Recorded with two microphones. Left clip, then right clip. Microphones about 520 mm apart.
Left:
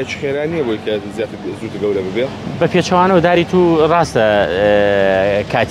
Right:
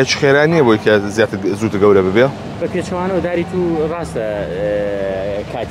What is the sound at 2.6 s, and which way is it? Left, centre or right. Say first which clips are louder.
Speech: left 8 dB; left.